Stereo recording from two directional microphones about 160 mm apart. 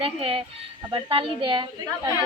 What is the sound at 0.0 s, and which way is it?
A woman's voice, 35° right (ahead or behind).